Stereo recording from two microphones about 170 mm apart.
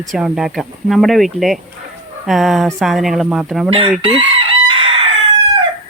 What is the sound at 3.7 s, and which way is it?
Chicken, 35° right (ahead or behind).